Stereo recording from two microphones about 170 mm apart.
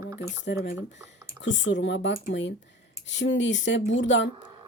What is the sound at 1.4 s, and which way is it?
Speech, 90° left.